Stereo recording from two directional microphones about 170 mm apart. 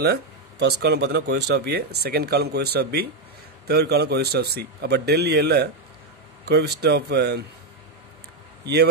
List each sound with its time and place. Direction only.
0.0 s speech: 70° right (ahead or behind)